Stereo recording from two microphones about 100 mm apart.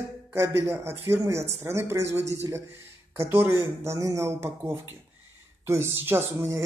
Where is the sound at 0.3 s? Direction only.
25° right (ahead or behind).